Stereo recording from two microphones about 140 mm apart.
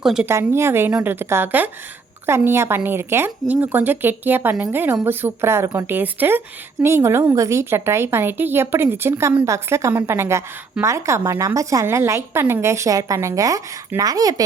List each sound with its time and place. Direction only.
0.0 s a woman's voice: 5° right (ahead or behind)
0.3 s a woman's voice: 20° right (ahead or behind)